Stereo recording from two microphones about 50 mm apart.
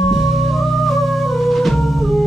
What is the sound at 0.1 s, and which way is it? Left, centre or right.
Music, centre.